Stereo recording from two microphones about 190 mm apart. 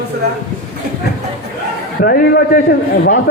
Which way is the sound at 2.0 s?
55° left (ahead or behind).